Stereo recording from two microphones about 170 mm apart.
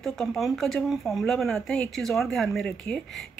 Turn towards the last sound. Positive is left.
turn(degrees=0)  # may be behind; listen again after turning